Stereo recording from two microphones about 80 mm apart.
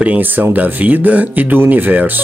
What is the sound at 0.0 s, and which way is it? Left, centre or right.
Speech, right.